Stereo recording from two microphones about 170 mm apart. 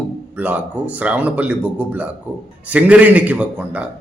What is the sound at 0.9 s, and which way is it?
A man's voice, 10° right (ahead or behind).